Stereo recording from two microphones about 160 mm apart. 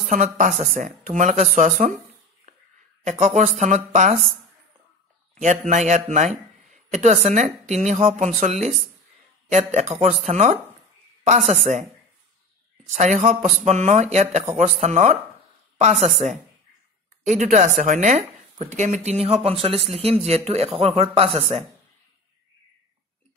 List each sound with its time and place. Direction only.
0.1 s speech: 55° right (ahead or behind)
3.3 s speech: 45° right (ahead or behind)
5.3 s a man's voice: 50° right (ahead or behind)
12.8 s speech: 50° right (ahead or behind)
17.2 s a woman's voice: 50° right (ahead or behind)